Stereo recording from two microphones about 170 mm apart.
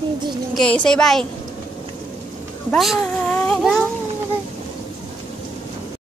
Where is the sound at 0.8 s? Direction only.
5° left (ahead or behind).